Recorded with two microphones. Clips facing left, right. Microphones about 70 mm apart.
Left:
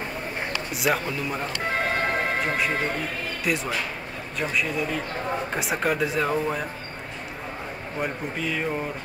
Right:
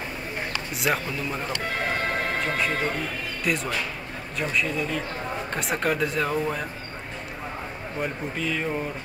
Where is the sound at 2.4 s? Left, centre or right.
Centre.